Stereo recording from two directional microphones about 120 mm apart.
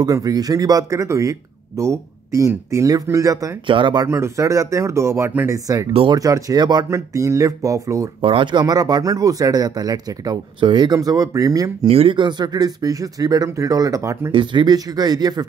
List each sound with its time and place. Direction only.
0.0 s speech: 30° right (ahead or behind)
3.6 s speech: 40° right (ahead or behind)
4.1 s speech: 25° right (ahead or behind)
8.2 s speech: 45° right (ahead or behind)
11.0 s speech: 30° right (ahead or behind)
11.9 s speech: 50° right (ahead or behind); by 14.3 s 25° right (ahead or behind)
14.3 s speech: 40° right (ahead or behind)